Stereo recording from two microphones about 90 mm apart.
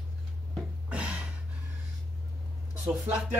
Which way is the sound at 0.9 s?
15° right (ahead or behind).